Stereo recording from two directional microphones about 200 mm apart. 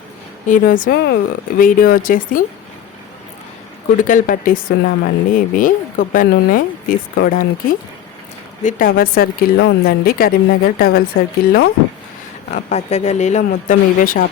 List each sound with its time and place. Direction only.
0.4 s speech: 40° left (ahead or behind)
4.0 s speech: 45° left (ahead or behind)
12.5 s speech: 35° left (ahead or behind)